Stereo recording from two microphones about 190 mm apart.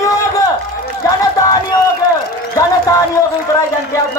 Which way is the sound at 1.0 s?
20° left (ahead or behind).